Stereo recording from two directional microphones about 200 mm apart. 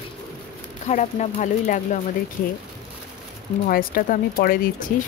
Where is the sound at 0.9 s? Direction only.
35° left (ahead or behind).